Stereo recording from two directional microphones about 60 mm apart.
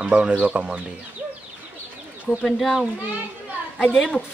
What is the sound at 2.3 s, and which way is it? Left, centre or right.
Speech, centre.